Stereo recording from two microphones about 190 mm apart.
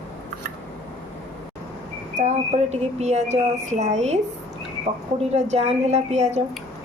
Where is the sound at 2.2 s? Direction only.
35° right (ahead or behind).